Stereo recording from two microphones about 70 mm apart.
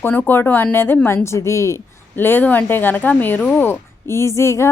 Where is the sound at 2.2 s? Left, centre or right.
Left.